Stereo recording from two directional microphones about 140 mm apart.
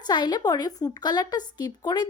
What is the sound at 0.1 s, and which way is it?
Speech, 30° left (ahead or behind).